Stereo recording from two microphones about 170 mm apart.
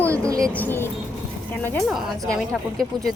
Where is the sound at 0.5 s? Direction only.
10° left (ahead or behind).